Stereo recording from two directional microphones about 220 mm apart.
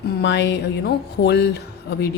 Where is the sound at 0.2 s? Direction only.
50° left (ahead or behind).